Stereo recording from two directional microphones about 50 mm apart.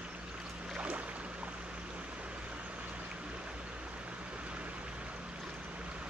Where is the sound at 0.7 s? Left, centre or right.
Right.